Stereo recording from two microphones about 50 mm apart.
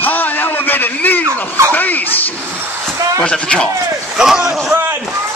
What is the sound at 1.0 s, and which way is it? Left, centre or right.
Speech, left.